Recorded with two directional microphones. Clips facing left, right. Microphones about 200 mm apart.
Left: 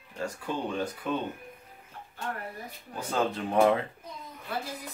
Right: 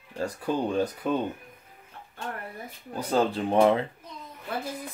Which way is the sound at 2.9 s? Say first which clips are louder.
Right 4 dB; 35° right (ahead or behind).